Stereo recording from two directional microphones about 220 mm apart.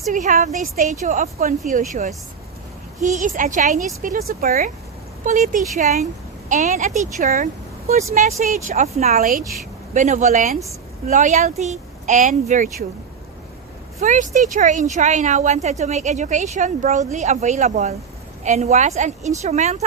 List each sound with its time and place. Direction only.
0.1 s a woman's voice: 35° right (ahead or behind)
14.0 s a woman's voice: 35° right (ahead or behind)